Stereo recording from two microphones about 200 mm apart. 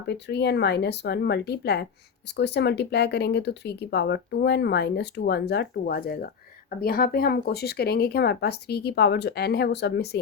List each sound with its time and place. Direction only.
0.1 s speech: 60° left (ahead or behind)